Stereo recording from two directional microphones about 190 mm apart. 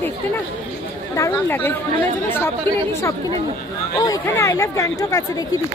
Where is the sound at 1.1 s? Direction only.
15° left (ahead or behind).